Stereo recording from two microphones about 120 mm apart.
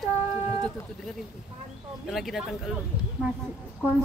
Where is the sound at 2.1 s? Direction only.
Centre (ahead or behind).